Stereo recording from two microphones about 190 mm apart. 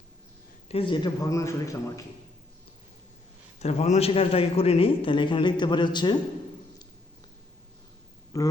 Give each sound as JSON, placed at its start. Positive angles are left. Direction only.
{"t": 0.7, "sound": "a man's voice", "side_deg": 25}
{"t": 3.6, "sound": "a man's voice", "side_deg": 35}
{"t": 8.3, "sound": "a man's voice", "side_deg": 20}